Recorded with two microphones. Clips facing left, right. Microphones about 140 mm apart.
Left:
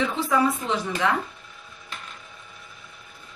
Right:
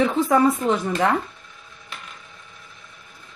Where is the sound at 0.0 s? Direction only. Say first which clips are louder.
Right 5 dB; 45° right (ahead or behind).